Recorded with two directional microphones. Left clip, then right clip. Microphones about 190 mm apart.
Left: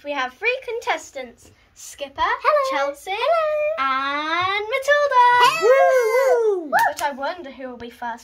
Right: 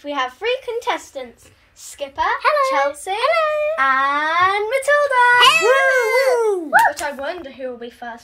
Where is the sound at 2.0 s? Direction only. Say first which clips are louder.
Right 2 dB; 40° right (ahead or behind).